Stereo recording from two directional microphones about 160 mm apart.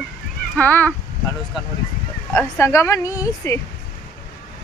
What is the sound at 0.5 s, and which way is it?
Speech, 10° left (ahead or behind).